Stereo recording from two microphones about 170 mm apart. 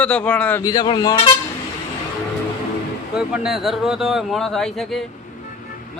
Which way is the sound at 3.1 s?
5° right (ahead or behind).